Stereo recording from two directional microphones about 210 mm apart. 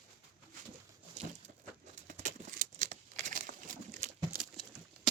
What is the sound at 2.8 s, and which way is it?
Crumpling, 35° right (ahead or behind).